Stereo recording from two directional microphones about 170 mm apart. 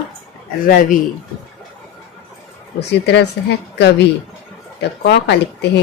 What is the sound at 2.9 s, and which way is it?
Speech, 85° left.